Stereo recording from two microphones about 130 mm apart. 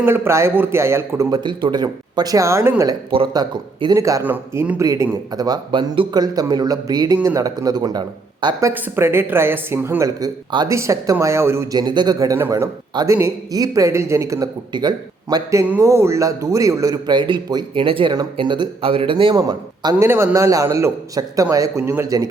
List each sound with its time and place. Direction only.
0.0 s a man's voice: 20° right (ahead or behind)
1.3 s a man's voice: 35° right (ahead or behind)
3.3 s a man's voice: 35° right (ahead or behind)
3.9 s a man's voice: 25° right (ahead or behind)
4.3 s speech: 10° right (ahead or behind)
4.8 s a man's voice: 25° right (ahead or behind)
7.2 s speech: 15° right (ahead or behind)
7.4 s a man's voice: 30° right (ahead or behind)
8.6 s a man's voice: 15° right (ahead or behind)
12.9 s a man's voice: 35° right (ahead or behind)
15.6 s a man's voice: 15° right (ahead or behind)